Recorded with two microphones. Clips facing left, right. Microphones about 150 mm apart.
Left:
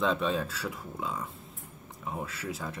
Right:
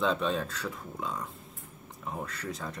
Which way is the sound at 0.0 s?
Centre (ahead or behind).